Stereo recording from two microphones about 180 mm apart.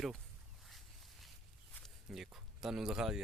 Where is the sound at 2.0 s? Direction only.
5° right (ahead or behind).